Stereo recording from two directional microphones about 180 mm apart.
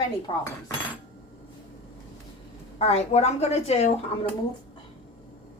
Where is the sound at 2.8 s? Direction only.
35° left (ahead or behind).